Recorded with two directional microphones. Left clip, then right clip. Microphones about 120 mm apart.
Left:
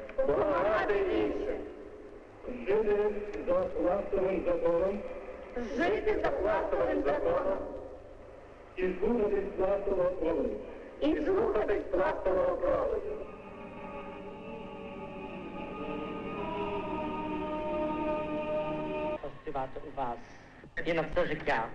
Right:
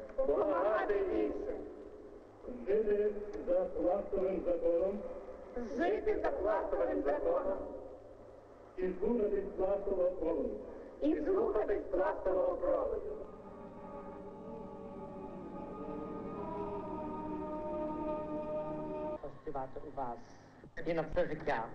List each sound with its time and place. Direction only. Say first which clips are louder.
0.3 s a sound: left 3 dB; 40° right (ahead or behind)
2.6 s a man's voice: left 4 dB; 35° right (ahead or behind)
5.6 s a man's voice: left 4 dB; 45° right (ahead or behind)
8.7 s a man's voice: left 4 dB; 35° right (ahead or behind)
15.0 s music: left 4 dB; 35° right (ahead or behind)
19.5 s a man's voice: left 5 dB; 30° right (ahead or behind)